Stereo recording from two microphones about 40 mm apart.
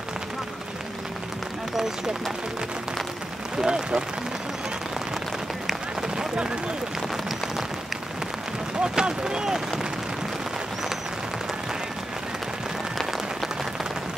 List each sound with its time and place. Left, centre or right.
3.6 s speech: centre
6.1 s a sound: right
8.8 s speech: centre